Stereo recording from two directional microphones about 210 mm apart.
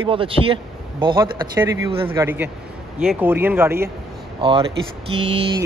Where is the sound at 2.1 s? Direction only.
10° right (ahead or behind).